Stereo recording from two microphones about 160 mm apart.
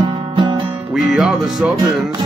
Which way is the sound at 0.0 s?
25° right (ahead or behind).